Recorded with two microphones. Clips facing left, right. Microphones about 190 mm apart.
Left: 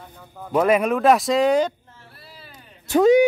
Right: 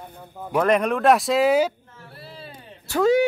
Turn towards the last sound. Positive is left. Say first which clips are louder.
# left 4 dB
turn(degrees=20)  # may be behind; listen again after turning